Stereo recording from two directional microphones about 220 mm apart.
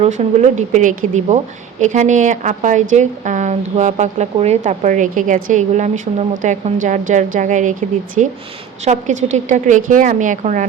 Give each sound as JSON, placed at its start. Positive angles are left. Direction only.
{"t": 0.0, "sound": "a woman's voice", "side_deg": -30}